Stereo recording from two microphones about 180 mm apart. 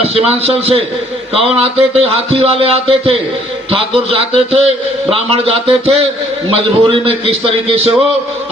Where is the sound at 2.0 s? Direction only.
30° right (ahead or behind).